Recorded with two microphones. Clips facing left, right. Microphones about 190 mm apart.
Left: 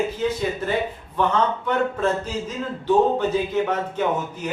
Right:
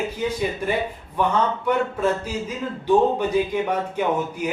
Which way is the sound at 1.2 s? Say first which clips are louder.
Even; 10° right (ahead or behind).